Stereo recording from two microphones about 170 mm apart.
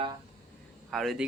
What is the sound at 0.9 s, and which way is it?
Speech, centre (ahead or behind).